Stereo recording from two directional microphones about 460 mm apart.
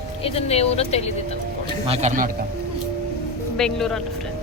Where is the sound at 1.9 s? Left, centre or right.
Centre.